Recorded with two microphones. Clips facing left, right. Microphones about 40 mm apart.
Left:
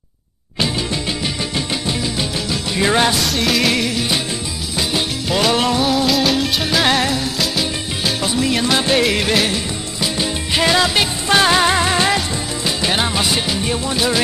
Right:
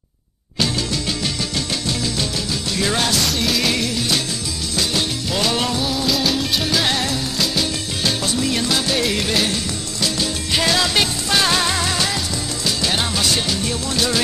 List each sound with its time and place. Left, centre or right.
0.6 s music: centre
3.2 s music: centre
6.0 s music: centre
8.7 s music: left
9.3 s music: centre
10.0 s music: centre